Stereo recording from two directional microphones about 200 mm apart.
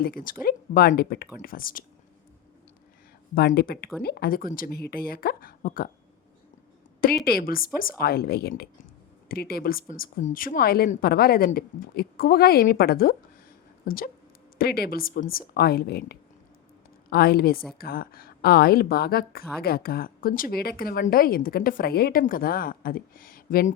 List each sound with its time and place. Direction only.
0.0 s a woman's voice: 45° left (ahead or behind)
3.3 s a woman's voice: 50° left (ahead or behind)
7.3 s a woman's voice: 50° left (ahead or behind)